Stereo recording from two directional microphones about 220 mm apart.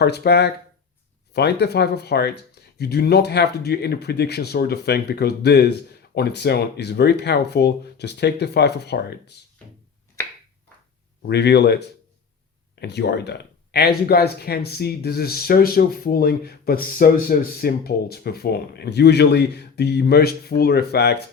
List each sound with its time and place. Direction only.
0.0 s speech: 50° left (ahead or behind)
11.3 s speech: 50° left (ahead or behind)